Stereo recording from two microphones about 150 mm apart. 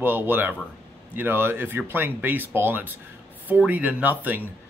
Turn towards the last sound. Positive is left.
turn(degrees=-10)  # may be behind; listen again after turning